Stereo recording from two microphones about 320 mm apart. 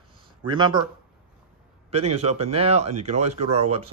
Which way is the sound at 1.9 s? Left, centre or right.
Centre.